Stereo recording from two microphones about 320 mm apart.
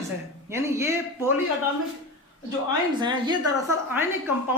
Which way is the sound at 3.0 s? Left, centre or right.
Centre.